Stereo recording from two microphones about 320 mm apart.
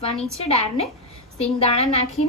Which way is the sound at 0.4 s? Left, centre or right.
Centre.